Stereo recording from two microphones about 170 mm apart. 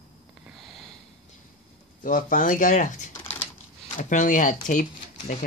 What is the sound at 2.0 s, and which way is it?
Speech, 55° left (ahead or behind).